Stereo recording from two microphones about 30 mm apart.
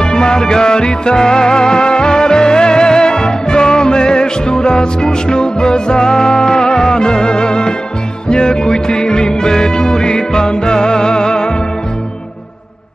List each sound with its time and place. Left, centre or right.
0.0 s music: left